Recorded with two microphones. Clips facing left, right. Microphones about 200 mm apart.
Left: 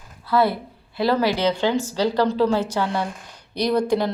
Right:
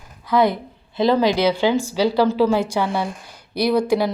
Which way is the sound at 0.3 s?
15° right (ahead or behind).